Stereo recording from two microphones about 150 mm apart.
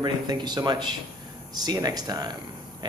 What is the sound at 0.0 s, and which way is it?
A man's voice, 30° right (ahead or behind).